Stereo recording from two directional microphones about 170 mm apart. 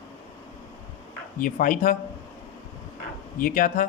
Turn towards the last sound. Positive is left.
turn(degrees=50)  # may be behind; listen again after turning